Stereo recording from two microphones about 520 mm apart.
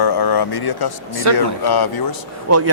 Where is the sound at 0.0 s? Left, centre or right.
Left.